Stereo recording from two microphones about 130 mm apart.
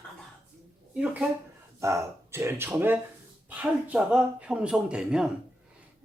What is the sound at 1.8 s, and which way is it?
Speech, 20° right (ahead or behind).